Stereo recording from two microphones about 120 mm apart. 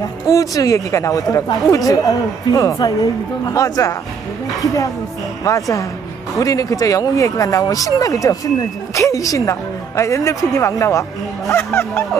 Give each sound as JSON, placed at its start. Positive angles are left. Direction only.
{"t": 0.3, "sound": "a woman's voice", "side_deg": 30}
{"t": 5.4, "sound": "a woman's voice", "side_deg": 30}